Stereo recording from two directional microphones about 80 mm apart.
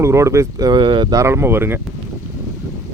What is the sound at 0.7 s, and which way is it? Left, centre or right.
Speech, right.